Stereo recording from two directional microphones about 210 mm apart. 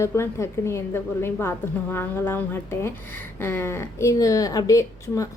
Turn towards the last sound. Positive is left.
turn(degrees=15)  # may be behind; listen again after turning